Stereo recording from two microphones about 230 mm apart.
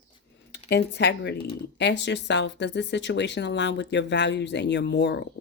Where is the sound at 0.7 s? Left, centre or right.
Left.